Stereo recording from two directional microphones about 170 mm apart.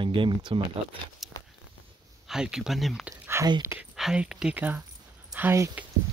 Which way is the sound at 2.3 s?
5° right (ahead or behind).